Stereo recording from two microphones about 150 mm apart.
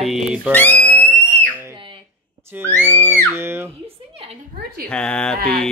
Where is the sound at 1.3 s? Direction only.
10° left (ahead or behind).